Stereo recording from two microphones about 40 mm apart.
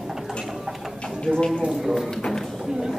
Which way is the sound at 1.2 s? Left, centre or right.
Centre.